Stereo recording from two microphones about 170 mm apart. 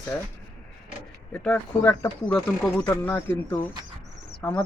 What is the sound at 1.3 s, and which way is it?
Speech, 10° left (ahead or behind).